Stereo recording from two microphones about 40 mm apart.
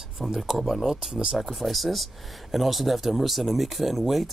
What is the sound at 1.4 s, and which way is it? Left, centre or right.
Speech, centre.